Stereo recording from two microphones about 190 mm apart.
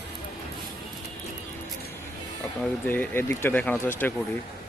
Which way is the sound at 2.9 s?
10° left (ahead or behind).